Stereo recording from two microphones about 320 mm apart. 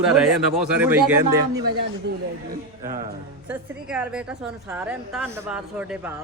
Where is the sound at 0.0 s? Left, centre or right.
Centre.